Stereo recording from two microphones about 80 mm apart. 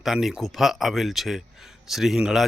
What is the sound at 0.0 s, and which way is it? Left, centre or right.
A man's voice, centre.